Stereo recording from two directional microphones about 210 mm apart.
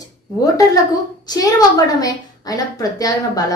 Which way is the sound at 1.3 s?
15° left (ahead or behind).